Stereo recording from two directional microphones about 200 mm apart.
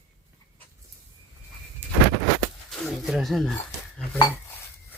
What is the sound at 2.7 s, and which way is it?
Wild animals, centre (ahead or behind).